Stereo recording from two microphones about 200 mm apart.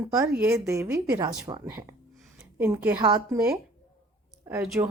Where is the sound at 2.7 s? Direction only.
20° right (ahead or behind).